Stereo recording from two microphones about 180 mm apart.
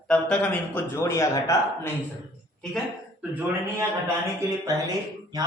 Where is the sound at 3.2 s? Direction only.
10° right (ahead or behind).